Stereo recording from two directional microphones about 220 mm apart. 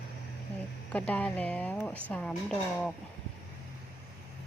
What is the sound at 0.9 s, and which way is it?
A woman's voice, 5° left (ahead or behind).